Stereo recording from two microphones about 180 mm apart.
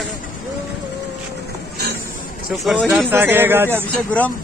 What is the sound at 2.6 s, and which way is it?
Speech, centre (ahead or behind).